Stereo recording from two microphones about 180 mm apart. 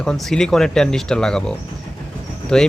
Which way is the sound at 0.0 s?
5° left (ahead or behind).